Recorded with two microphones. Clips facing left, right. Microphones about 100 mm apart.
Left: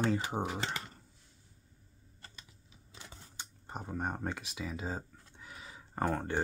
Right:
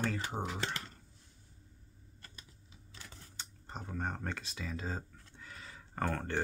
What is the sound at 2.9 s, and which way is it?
Camera, 15° left (ahead or behind).